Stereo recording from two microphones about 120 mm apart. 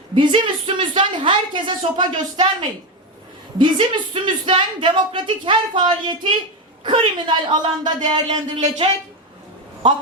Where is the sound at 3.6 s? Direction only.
40° right (ahead or behind).